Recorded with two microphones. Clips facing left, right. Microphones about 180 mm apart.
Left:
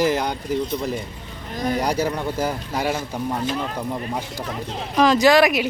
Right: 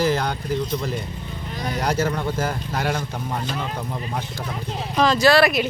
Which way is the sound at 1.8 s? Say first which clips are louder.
Right 3 dB; 15° left (ahead or behind).